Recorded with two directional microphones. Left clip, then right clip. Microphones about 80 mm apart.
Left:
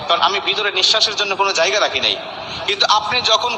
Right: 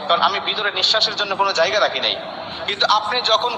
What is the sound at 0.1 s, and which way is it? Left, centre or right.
A man's voice, left.